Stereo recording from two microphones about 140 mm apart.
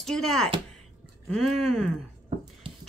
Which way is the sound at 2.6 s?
35° right (ahead or behind).